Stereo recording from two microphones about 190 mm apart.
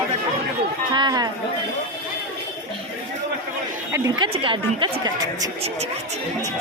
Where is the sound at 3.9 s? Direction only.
15° right (ahead or behind).